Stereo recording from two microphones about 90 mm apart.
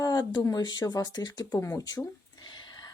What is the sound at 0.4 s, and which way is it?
Speech, 45° left (ahead or behind).